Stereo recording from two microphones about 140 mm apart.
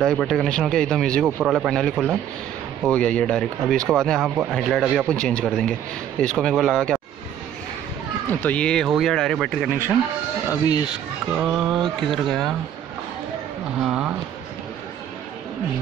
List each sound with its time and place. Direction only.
0.0 s speech: centre (ahead or behind)
1.4 s speech: 5° right (ahead or behind)
1.7 s speech: 5° left (ahead or behind)
8.3 s speech: 10° left (ahead or behind)
10.5 s speech: 25° left (ahead or behind)
11.3 s speech: 5° right (ahead or behind)
13.8 s speech: 10° right (ahead or behind)